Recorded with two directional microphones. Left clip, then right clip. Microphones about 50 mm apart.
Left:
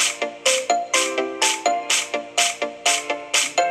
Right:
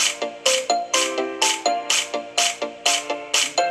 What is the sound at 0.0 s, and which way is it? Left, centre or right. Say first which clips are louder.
Music: even; right.